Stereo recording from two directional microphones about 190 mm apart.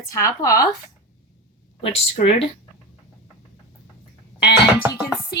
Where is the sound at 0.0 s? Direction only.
15° left (ahead or behind).